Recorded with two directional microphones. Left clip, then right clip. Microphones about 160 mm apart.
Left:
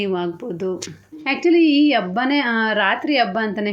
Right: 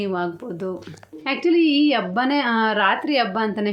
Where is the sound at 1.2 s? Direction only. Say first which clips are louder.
Left 3 dB; 5° left (ahead or behind).